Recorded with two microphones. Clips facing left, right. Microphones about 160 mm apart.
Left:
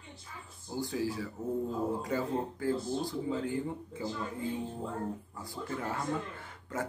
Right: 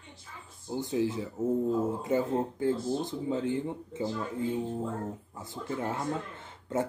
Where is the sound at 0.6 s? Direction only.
20° right (ahead or behind).